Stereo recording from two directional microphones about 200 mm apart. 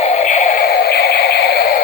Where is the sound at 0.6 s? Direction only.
55° left (ahead or behind).